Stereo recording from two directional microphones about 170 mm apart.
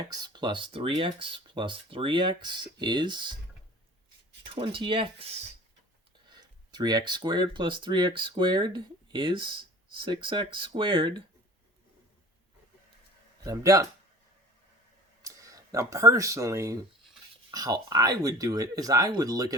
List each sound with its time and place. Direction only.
0.0 s speech: 25° right (ahead or behind)
4.4 s speech: 30° right (ahead or behind)
13.4 s speech: 20° right (ahead or behind)
15.2 s speech: 20° right (ahead or behind)